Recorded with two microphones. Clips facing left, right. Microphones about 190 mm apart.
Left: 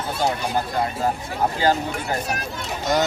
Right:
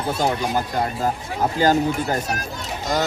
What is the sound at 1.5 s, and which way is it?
Speech, 45° right (ahead or behind).